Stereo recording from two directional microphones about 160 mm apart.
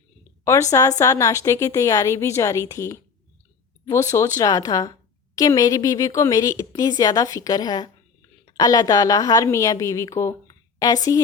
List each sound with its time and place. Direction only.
0.4 s a woman's voice: 20° left (ahead or behind)